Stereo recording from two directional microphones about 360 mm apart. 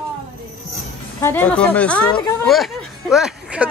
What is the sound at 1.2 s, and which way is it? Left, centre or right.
Speech, centre.